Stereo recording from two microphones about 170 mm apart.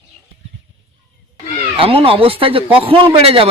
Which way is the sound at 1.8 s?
30° right (ahead or behind).